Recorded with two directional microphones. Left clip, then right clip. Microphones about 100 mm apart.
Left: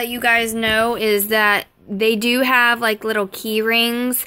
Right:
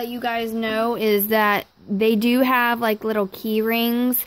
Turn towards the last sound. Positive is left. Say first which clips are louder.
# left 4 dB
turn(degrees=-50)  # may be behind; listen again after turning